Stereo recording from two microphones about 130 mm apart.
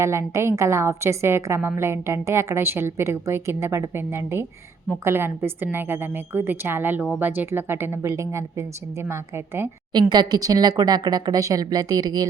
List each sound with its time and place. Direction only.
0.0 s a woman's voice: 20° right (ahead or behind)
9.9 s speech: 35° right (ahead or behind)